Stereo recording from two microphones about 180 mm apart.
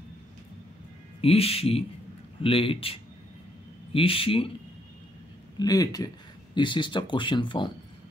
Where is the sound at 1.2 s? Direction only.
35° left (ahead or behind).